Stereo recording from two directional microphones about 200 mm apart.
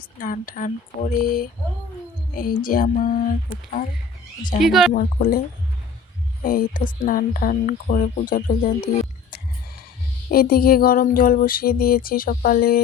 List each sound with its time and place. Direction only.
0.2 s female singing: 45° left (ahead or behind)
4.6 s speech: centre (ahead or behind)
4.9 s female singing: 45° left (ahead or behind)
6.4 s female singing: 45° left (ahead or behind)
10.2 s female singing: 50° left (ahead or behind)